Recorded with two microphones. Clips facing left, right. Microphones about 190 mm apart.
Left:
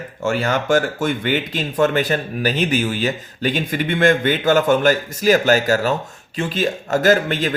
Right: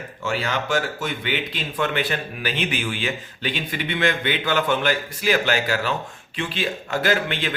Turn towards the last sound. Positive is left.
turn(degrees=40)  # may be behind; listen again after turning